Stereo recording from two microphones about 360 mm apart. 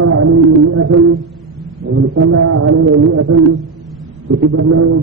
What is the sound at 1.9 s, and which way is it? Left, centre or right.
Speech, right.